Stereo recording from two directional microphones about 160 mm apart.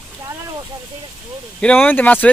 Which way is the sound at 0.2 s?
20° right (ahead or behind).